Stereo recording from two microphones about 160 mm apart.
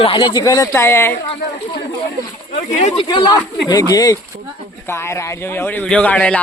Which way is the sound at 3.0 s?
25° left (ahead or behind).